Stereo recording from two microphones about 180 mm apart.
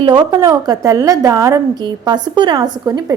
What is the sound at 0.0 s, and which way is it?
A woman's voice, 25° right (ahead or behind).